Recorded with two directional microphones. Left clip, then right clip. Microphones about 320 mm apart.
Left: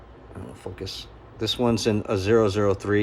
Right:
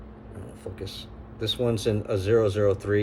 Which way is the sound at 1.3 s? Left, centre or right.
Centre.